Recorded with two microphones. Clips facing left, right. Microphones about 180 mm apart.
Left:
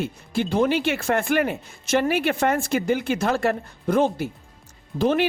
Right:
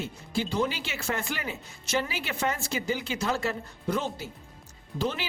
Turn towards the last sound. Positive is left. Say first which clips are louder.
# left 10 dB
turn(degrees=60)  # may be behind; listen again after turning